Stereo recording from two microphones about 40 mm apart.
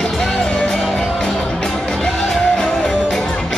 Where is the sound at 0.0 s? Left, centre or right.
Centre.